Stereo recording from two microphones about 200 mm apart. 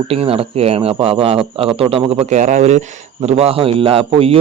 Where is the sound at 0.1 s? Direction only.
30° right (ahead or behind).